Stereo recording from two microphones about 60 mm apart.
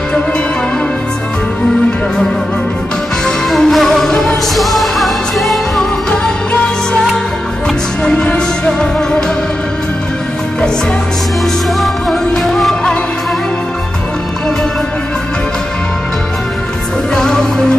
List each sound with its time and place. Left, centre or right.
3.3 s music: centre
8.0 s music: centre
11.8 s music: centre
17.1 s music: centre